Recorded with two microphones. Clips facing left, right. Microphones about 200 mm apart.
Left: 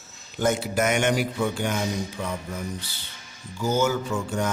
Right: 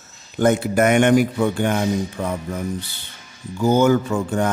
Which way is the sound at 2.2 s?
40° right (ahead or behind).